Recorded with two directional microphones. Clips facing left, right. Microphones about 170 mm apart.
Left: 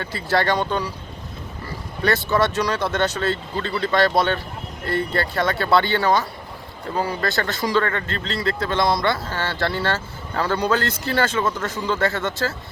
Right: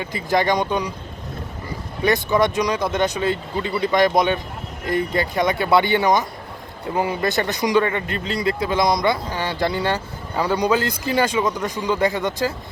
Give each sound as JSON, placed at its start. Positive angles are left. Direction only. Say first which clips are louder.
{"t": 0.0, "sound": "speech", "louder": "right 1 dB", "side_deg": -15}
{"t": 2.0, "sound": "speech", "louder": "right 2 dB", "side_deg": -15}